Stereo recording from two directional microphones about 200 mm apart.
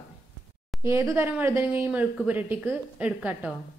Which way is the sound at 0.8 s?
15° right (ahead or behind).